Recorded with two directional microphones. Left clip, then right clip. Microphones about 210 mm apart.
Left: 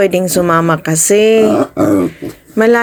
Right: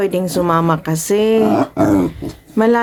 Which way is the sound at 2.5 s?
5° left (ahead or behind).